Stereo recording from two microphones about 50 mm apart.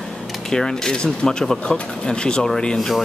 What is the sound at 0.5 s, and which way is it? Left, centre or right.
Speech, centre.